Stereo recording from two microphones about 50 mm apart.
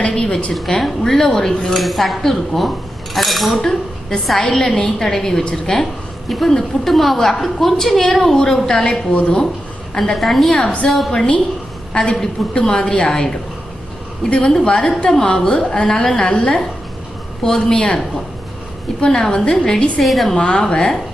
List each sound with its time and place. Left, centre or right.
0.0 s a sound: left
0.7 s speech: centre
3.6 s a woman's voice: centre
10.5 s a woman's voice: centre
10.8 s speech: centre
11.1 s a woman's voice: centre
12.1 s speech: centre
12.5 s a woman's voice: centre
19.0 s a woman's voice: centre
20.0 s speech: centre
20.3 s a woman's voice: centre